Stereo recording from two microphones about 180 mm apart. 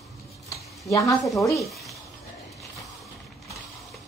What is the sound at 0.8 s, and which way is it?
Speech, 20° left (ahead or behind).